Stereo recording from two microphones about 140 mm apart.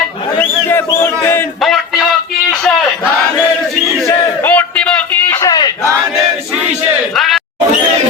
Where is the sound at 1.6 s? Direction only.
Centre (ahead or behind).